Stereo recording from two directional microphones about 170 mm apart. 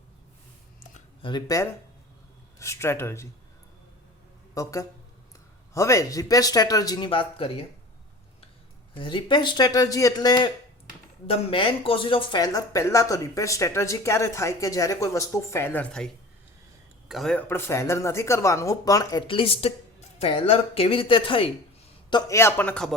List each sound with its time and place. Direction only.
1.2 s a man's voice: 25° left (ahead or behind)
4.5 s speech: 20° left (ahead or behind)
9.0 s speech: 30° left (ahead or behind); by 16.0 s 5° left (ahead or behind)
17.1 s speech: centre (ahead or behind)
17.5 s speech: 15° left (ahead or behind); by 21.5 s 30° left (ahead or behind)
22.1 s a man's voice: 15° left (ahead or behind)